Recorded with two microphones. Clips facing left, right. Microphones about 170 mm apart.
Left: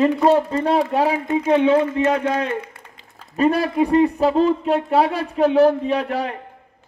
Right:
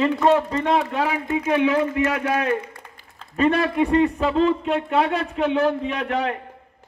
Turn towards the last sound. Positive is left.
turn(degrees=35)  # may be behind; listen again after turning